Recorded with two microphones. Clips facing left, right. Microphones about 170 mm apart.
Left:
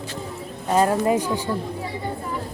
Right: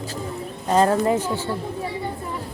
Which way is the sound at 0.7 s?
10° left (ahead or behind).